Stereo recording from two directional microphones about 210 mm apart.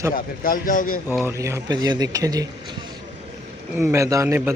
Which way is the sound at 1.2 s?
15° right (ahead or behind).